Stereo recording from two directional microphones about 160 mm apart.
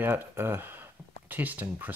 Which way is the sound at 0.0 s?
15° right (ahead or behind).